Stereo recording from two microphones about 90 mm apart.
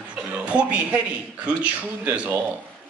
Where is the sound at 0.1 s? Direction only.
10° right (ahead or behind).